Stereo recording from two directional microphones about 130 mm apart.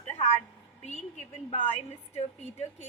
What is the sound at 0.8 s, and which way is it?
A woman's voice, 60° left (ahead or behind).